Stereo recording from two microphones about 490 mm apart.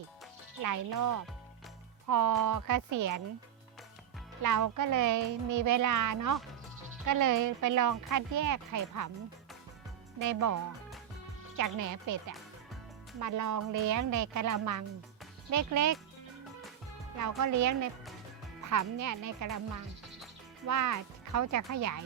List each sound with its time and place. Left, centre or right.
0.6 s speech: right
4.4 s speech: right
10.2 s speech: right
13.1 s speech: right
17.2 s speech: right
20.7 s speech: right